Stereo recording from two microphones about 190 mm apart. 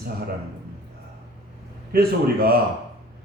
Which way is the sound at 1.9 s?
55° right (ahead or behind).